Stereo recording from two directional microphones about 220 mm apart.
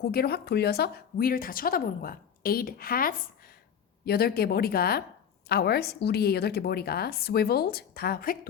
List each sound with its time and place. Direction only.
0.0 s a woman's voice: 45° left (ahead or behind)